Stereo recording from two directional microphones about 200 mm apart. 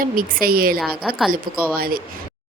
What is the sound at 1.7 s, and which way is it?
Speech, 50° right (ahead or behind).